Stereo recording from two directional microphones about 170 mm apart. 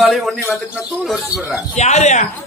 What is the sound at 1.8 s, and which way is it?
Speech, 40° left (ahead or behind).